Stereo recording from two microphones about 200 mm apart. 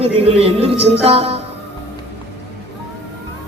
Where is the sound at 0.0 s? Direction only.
30° right (ahead or behind).